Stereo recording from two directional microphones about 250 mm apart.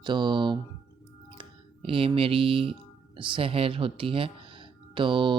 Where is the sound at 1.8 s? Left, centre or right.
Right.